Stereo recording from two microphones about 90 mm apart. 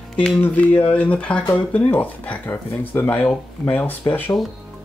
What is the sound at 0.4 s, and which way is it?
Speech, 20° left (ahead or behind).